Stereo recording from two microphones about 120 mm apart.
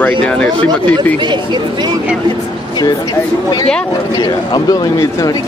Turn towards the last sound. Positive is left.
turn(degrees=30)  # may be behind; listen again after turning